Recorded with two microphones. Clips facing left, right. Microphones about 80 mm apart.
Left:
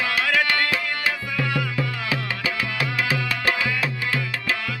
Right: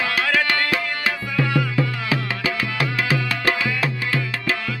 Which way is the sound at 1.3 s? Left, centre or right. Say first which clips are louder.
Right 4 dB; right.